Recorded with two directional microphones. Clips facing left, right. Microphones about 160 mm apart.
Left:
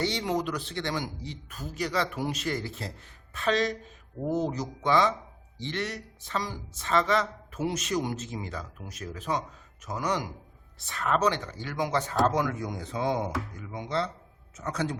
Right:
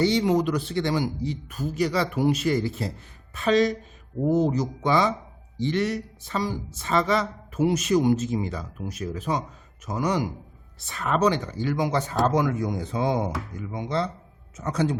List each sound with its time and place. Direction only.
0.0 s speech: 5° right (ahead or behind)
4.3 s speech: 20° right (ahead or behind)
4.5 s speech: 5° right (ahead or behind)